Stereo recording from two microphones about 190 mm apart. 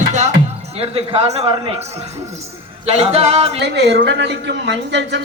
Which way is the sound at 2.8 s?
35° right (ahead or behind).